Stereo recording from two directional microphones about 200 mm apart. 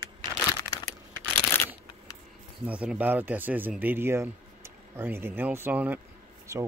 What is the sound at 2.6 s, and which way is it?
Speech, 5° right (ahead or behind).